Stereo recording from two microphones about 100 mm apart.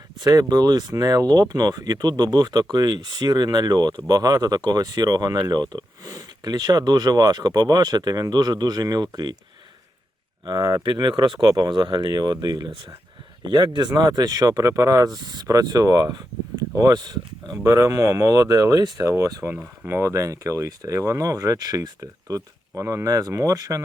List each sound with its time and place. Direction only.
0.2 s speech: 40° right (ahead or behind)
10.4 s speech: 40° right (ahead or behind)
10.8 s speech: 45° right (ahead or behind)
17.6 s speech: 30° right (ahead or behind)
19.0 s speech: 25° right (ahead or behind)
19.5 s speech: 5° right (ahead or behind)
19.9 s speech: 30° right (ahead or behind)